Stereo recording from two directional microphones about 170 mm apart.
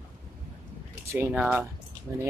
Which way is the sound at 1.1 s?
15° right (ahead or behind).